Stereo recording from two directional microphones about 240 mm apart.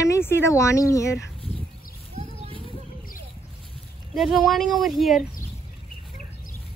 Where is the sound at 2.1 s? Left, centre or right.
Right.